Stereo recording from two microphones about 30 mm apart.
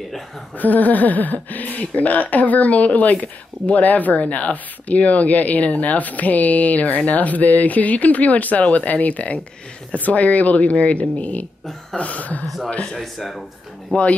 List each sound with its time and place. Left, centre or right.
0.6 s speech: left
12.6 s speech: left
12.9 s speech: centre
13.9 s speech: left